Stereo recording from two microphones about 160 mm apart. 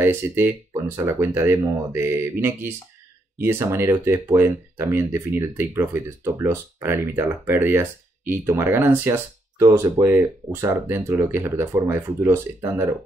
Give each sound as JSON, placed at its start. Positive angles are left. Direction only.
{"t": 0.0, "sound": "speech", "side_deg": -15}